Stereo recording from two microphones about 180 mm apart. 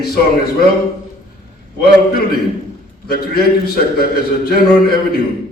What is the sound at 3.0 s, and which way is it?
A man's voice, 60° left (ahead or behind).